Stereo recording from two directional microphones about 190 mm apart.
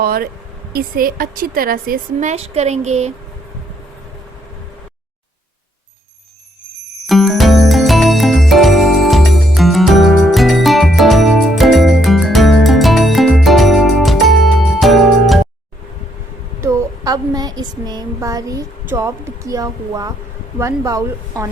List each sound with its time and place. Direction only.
0.0 s a woman's voice: 50° right (ahead or behind)
2.3 s speech: 35° right (ahead or behind)
7.1 s jingle: centre (ahead or behind)
16.6 s a woman's voice: 15° right (ahead or behind)